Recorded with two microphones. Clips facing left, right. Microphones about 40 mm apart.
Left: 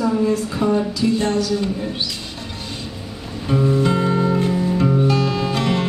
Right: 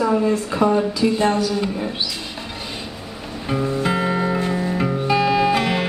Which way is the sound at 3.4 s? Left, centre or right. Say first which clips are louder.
Left 3 dB; centre.